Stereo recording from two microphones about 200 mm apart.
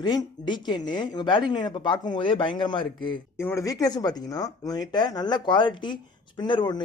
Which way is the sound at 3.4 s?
15° left (ahead or behind).